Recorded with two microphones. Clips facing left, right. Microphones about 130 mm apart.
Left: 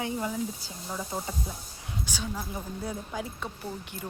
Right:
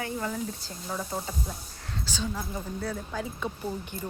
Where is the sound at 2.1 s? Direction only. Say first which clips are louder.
Right 3 dB; 10° left (ahead or behind).